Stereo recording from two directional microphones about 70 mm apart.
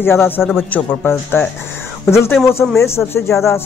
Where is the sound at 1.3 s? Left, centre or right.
Left.